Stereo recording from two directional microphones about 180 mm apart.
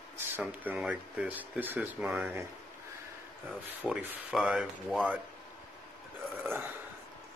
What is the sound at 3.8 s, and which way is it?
Speech, 10° right (ahead or behind).